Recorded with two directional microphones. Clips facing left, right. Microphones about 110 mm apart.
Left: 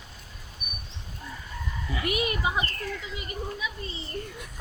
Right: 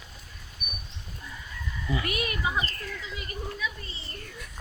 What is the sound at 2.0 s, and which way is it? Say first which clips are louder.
Speech: left 3 dB; 25° left (ahead or behind).